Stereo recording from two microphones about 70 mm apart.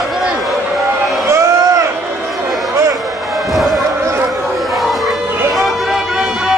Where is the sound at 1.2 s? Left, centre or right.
Right.